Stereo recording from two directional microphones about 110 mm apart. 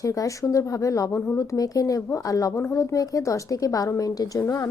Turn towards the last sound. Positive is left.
turn(degrees=30)  # may be behind; listen again after turning